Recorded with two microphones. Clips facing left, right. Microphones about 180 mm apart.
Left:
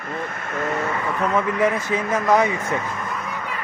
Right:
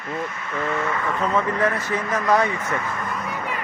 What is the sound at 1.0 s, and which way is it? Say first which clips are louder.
Speech: left 1 dB; 10° left (ahead or behind).